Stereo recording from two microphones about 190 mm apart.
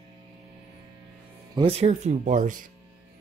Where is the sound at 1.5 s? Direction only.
30° right (ahead or behind).